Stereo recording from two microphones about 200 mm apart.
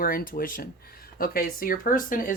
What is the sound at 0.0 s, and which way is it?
Speech, 45° left (ahead or behind).